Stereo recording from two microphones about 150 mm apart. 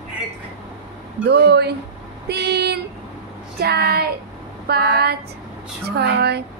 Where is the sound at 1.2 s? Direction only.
90° right.